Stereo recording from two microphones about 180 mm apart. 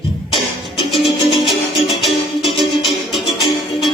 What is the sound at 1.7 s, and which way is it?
Music, centre (ahead or behind).